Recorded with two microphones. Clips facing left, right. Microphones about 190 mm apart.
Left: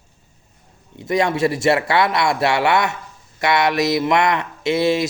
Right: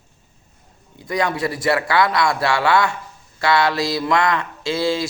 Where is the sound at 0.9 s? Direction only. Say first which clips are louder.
Left 3 dB; 25° left (ahead or behind).